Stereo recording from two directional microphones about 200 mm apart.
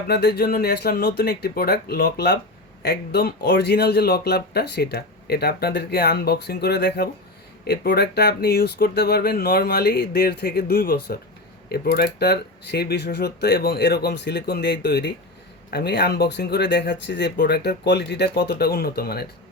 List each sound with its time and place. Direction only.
0.1 s speech: 55° left (ahead or behind)